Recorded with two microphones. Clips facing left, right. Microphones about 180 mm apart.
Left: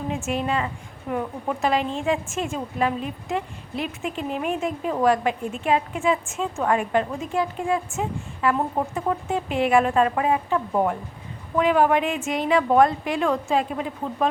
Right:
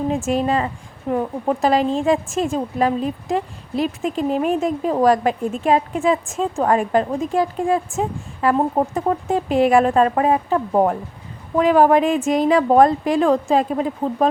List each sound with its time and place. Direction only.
0.3 s a woman's voice: 40° right (ahead or behind)